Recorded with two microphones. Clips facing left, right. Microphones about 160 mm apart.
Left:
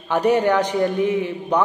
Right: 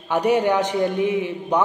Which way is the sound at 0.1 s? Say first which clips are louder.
Left 1 dB; 10° right (ahead or behind).